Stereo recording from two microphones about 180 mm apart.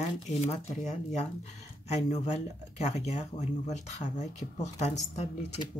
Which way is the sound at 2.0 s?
40° left (ahead or behind).